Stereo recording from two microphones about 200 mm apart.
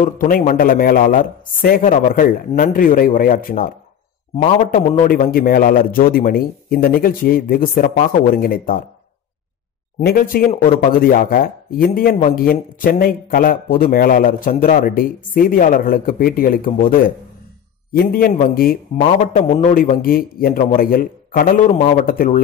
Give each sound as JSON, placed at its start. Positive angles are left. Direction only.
{"t": 0.0, "sound": "a man's voice", "side_deg": 45}
{"t": 9.9, "sound": "speech", "side_deg": 45}